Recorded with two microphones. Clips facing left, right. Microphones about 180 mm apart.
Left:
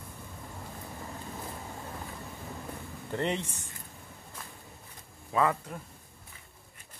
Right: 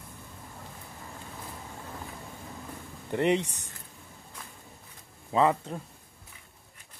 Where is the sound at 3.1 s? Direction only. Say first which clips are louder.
Right 6 dB; 15° right (ahead or behind).